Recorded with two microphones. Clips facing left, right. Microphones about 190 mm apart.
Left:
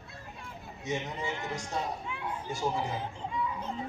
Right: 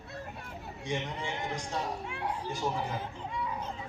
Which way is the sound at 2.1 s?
60° right (ahead or behind).